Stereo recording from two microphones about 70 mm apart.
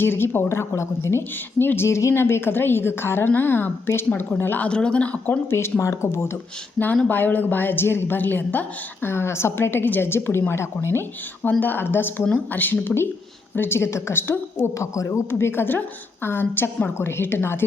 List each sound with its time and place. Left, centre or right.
0.0 s a woman's voice: left
4.7 s a woman's voice: centre
5.8 s speech: left
6.7 s a woman's voice: left